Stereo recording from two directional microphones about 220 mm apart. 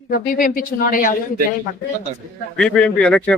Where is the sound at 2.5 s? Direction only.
5° left (ahead or behind).